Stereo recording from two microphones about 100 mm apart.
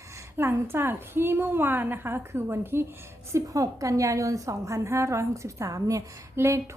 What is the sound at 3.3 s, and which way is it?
A woman's voice, 35° right (ahead or behind).